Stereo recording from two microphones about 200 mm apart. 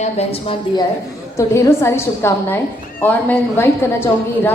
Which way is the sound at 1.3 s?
15° left (ahead or behind).